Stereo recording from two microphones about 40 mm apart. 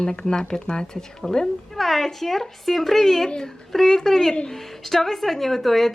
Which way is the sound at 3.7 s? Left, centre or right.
Centre.